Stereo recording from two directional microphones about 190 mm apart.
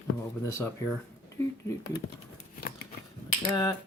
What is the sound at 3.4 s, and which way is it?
Speech, 20° left (ahead or behind).